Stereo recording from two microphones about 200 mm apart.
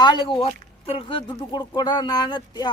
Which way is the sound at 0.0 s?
25° left (ahead or behind).